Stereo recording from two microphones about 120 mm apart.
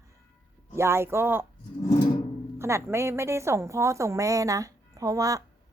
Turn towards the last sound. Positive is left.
turn(degrees=-30)  # may be behind; listen again after turning